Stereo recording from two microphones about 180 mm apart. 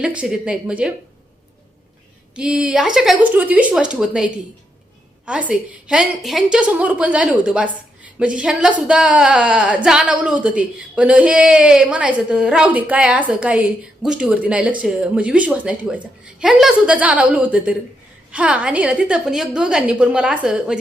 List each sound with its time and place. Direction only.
0.0 s a woman's voice: 5° right (ahead or behind)
2.3 s a woman's voice: 5° right (ahead or behind)